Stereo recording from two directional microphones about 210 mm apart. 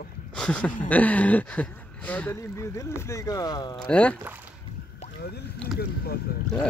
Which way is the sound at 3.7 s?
5° left (ahead or behind).